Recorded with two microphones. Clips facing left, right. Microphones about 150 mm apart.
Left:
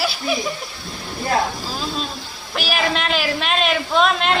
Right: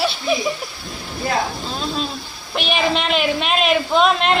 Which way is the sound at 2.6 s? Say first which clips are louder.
Right 2 dB; centre (ahead or behind).